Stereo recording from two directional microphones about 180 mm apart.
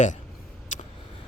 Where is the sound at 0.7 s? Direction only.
45° left (ahead or behind).